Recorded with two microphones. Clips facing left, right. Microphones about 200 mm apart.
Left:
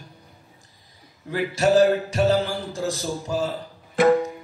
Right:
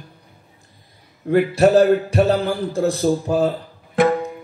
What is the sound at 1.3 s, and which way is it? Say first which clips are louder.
A man's voice: right 6 dB; 55° right (ahead or behind).